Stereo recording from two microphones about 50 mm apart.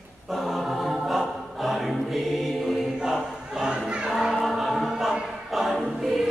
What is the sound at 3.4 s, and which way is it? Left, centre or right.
Crowd, centre.